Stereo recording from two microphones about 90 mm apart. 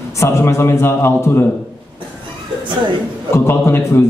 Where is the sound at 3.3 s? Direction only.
30° left (ahead or behind).